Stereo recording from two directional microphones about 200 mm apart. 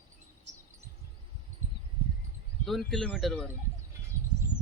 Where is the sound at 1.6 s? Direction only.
35° right (ahead or behind).